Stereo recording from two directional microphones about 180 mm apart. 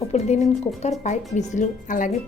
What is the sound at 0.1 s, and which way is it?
A woman's voice, 40° left (ahead or behind).